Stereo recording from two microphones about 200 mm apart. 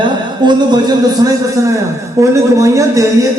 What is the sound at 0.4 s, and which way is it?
Speech, 20° right (ahead or behind).